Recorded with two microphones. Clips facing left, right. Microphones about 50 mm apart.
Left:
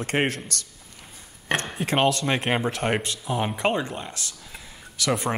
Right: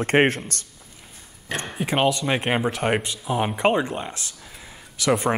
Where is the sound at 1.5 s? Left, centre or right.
Left.